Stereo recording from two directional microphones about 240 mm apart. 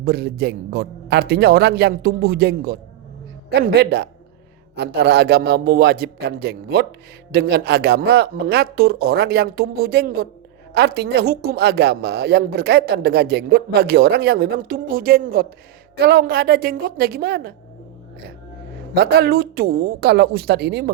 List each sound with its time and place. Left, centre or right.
0.0 s a woman's voice: right
18.9 s a woman's voice: right